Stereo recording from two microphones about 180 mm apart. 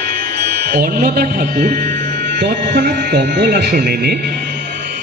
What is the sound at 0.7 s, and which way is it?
Speech, 55° right (ahead or behind).